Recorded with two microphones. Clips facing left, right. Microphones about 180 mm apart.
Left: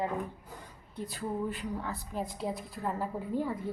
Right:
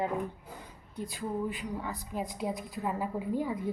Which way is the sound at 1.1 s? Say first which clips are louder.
Even; 15° right (ahead or behind).